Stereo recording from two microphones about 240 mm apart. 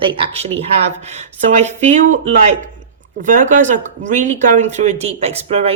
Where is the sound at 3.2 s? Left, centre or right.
Right.